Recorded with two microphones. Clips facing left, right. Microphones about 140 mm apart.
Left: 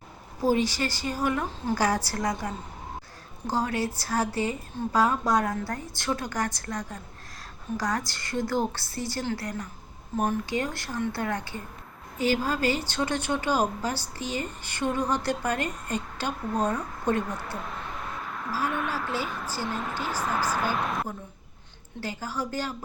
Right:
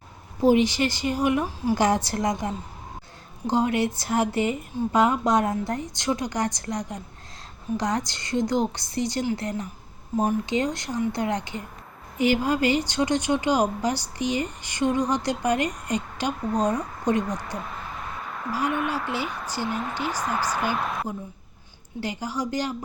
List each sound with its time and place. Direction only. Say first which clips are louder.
0.4 s a woman's voice: right 5 dB; 20° right (ahead or behind)
17.6 s a sound: right 1 dB; centre (ahead or behind)
18.5 s speech: right 3 dB; 10° right (ahead or behind)
20.7 s a woman's voice: right 1 dB; centre (ahead or behind)
22.0 s speech: right 3 dB; 15° right (ahead or behind)